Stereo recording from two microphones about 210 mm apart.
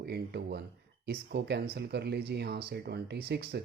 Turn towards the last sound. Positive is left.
turn(degrees=-50)  # may be behind; listen again after turning